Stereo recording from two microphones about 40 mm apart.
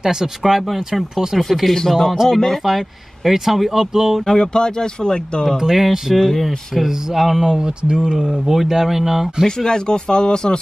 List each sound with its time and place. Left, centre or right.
0.0 s speech: centre
0.5 s speech: centre
1.4 s speech: centre
3.3 s speech: centre
4.3 s speech: centre
5.6 s speech: centre
6.1 s speech: centre
6.8 s speech: centre
7.4 s speech: centre
9.6 s speech: centre